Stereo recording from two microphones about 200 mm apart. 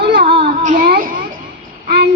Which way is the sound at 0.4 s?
40° right (ahead or behind).